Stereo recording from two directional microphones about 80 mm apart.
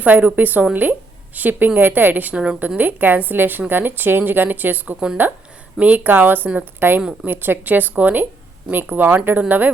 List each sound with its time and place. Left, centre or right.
0.0 s a woman's voice: right